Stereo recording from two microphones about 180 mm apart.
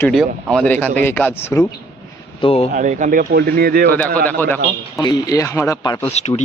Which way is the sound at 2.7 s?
45° right (ahead or behind).